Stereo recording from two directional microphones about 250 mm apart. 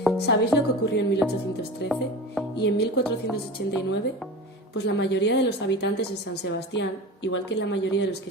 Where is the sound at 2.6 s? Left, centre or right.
Left.